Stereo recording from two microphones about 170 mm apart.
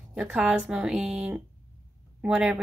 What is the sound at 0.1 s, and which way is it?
A woman's voice, 5° right (ahead or behind).